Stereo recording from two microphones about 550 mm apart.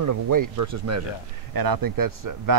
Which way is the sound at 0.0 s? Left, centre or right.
Right.